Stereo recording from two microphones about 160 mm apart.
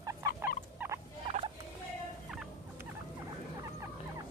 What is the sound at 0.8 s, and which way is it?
Rodents, 10° right (ahead or behind).